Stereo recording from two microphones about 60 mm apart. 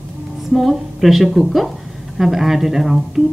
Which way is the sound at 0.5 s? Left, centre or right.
Centre.